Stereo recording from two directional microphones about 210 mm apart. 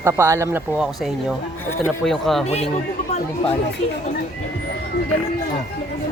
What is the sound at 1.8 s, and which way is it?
Speech, centre (ahead or behind).